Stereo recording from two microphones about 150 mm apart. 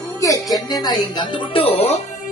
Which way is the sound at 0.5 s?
25° left (ahead or behind).